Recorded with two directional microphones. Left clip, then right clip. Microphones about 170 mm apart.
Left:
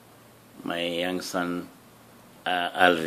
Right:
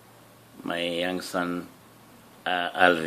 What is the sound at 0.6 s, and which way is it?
Speech, 5° right (ahead or behind).